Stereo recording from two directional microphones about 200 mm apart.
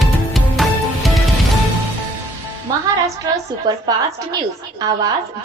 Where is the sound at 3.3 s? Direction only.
20° right (ahead or behind).